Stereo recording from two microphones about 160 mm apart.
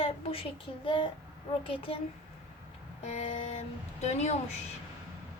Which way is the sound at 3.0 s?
45° left (ahead or behind).